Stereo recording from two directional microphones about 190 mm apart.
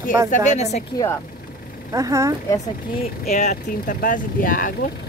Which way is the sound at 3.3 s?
40° left (ahead or behind).